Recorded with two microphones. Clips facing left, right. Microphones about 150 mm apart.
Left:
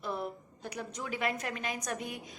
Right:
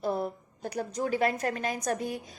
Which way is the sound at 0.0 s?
40° right (ahead or behind).